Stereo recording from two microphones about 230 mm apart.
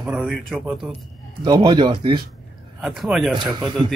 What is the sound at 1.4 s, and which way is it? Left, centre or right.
Speech, centre.